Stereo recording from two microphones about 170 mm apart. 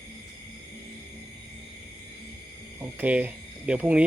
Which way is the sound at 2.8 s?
10° right (ahead or behind).